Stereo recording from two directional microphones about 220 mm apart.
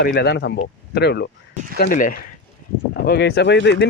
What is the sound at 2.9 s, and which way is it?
Speech, 50° left (ahead or behind).